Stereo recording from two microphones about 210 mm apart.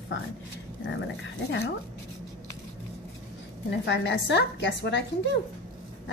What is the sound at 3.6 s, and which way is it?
A woman's voice, 55° left (ahead or behind).